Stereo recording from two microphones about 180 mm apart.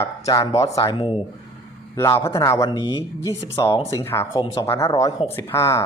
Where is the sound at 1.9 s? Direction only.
15° left (ahead or behind).